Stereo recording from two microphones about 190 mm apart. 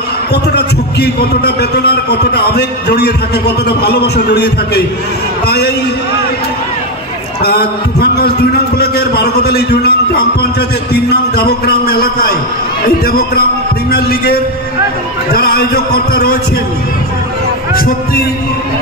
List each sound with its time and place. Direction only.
0.3 s a man's voice: 55° left (ahead or behind)
7.4 s a man's voice: 55° left (ahead or behind)
17.7 s speech: 50° left (ahead or behind)